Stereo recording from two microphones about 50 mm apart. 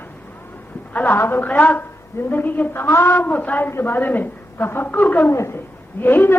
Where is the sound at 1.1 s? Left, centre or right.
Left.